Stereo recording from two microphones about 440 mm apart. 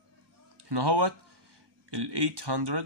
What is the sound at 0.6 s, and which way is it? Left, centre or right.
Speech, right.